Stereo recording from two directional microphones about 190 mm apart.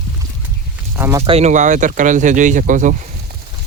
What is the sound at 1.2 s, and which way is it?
Speech, 35° right (ahead or behind).